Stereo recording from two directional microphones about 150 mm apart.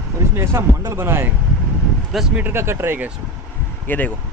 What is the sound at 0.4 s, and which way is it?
Speech, 20° right (ahead or behind).